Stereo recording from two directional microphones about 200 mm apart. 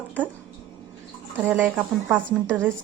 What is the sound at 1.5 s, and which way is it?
A woman's voice, 10° right (ahead or behind).